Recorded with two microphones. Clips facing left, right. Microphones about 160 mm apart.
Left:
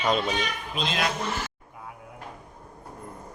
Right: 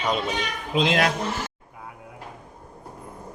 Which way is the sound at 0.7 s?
85° right.